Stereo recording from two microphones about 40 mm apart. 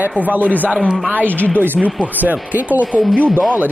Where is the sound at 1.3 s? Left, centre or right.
Left.